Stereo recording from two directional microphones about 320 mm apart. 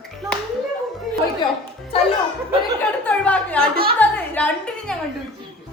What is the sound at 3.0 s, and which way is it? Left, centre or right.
A woman's voice, centre.